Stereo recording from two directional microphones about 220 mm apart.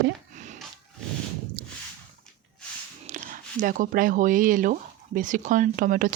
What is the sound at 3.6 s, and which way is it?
Speech, 40° right (ahead or behind).